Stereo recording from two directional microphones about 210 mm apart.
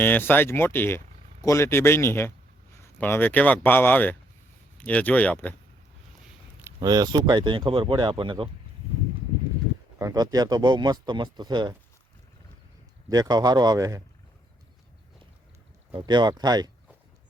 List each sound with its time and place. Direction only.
0.0 s speech: 10° left (ahead or behind)
6.7 s speech: 20° right (ahead or behind)
10.0 s speech: 15° right (ahead or behind)
13.1 s speech: 20° right (ahead or behind)
15.9 s speech: 20° right (ahead or behind)